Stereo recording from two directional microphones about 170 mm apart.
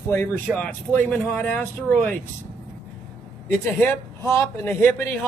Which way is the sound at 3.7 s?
15° left (ahead or behind).